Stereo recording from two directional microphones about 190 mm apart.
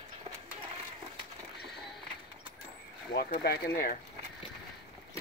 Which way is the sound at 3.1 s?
55° left (ahead or behind).